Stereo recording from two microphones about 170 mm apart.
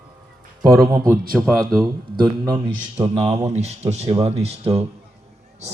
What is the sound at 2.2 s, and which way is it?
Speech, 25° right (ahead or behind).